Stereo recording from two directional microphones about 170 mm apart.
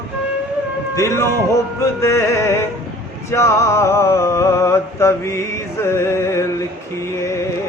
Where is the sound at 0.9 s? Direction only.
15° left (ahead or behind).